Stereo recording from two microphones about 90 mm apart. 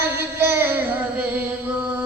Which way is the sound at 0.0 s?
25° right (ahead or behind).